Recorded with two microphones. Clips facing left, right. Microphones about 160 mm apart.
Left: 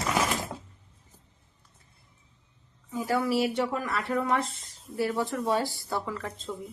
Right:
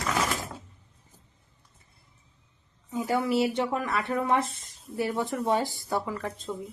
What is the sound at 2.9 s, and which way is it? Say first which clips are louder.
A woman's voice: right 1 dB; 20° right (ahead or behind).